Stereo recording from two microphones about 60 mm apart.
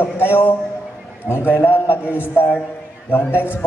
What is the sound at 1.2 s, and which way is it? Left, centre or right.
Speech, left.